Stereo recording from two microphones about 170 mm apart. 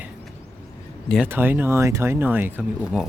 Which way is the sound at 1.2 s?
10° right (ahead or behind).